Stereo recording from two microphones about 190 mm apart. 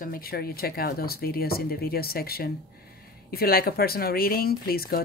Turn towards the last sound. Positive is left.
turn(degrees=50)  # may be behind; listen again after turning